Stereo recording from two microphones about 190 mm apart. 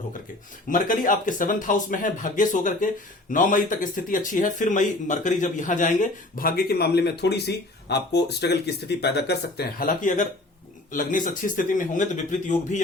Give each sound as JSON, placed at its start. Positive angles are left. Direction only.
{"t": 0.7, "sound": "speech", "side_deg": 45}